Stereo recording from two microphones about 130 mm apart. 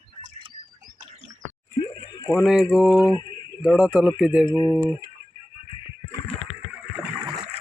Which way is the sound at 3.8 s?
10° right (ahead or behind).